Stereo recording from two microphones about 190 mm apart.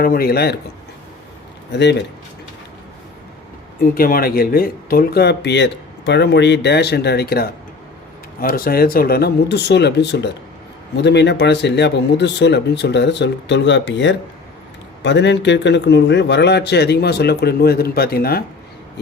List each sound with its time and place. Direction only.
0.0 s speech: 50° left (ahead or behind)
1.7 s speech: 65° left (ahead or behind)
3.9 s speech: 50° left (ahead or behind)